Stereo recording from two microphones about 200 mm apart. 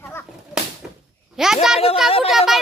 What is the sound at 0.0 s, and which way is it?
Whip, 10° left (ahead or behind).